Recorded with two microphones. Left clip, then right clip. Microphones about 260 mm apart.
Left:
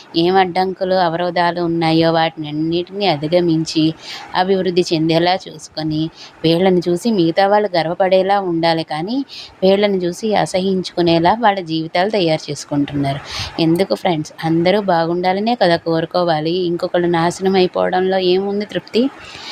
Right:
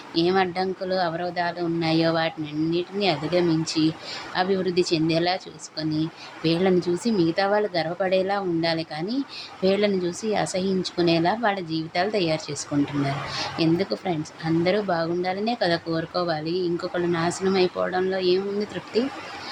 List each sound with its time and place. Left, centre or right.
0.1 s speech: left